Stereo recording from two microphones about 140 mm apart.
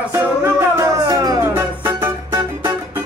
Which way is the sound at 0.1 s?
20° right (ahead or behind).